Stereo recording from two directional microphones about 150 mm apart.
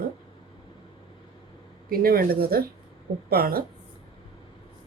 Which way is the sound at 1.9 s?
80° right.